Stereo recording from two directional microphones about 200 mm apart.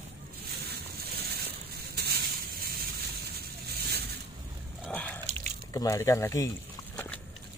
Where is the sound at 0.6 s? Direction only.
50° right (ahead or behind).